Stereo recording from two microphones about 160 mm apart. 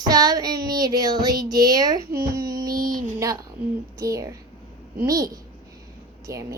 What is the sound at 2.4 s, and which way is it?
Child singing, 25° right (ahead or behind).